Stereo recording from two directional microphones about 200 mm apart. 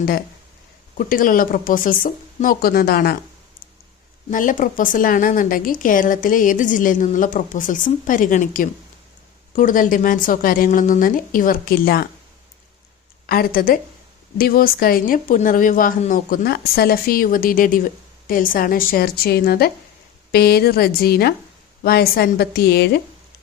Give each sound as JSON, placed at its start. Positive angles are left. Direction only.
{"t": 0.9, "sound": "a woman's voice", "side_deg": 45}
{"t": 4.3, "sound": "a woman's voice", "side_deg": 40}
{"t": 13.2, "sound": "a woman's voice", "side_deg": 50}